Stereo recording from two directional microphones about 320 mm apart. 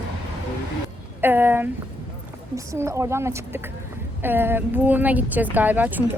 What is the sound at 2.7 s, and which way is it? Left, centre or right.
A woman's voice, centre.